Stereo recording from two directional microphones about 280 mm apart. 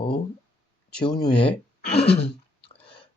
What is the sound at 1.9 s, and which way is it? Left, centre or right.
Speech, left.